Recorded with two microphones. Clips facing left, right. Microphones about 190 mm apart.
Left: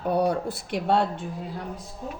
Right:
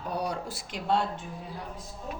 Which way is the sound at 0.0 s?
60° left (ahead or behind).